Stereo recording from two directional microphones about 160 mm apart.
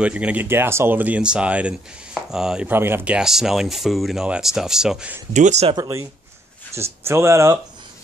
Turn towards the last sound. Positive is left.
turn(degrees=-20)  # may be behind; listen again after turning